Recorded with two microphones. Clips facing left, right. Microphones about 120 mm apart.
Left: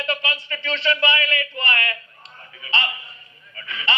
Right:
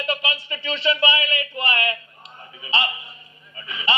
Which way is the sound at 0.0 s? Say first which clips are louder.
Even; 20° right (ahead or behind).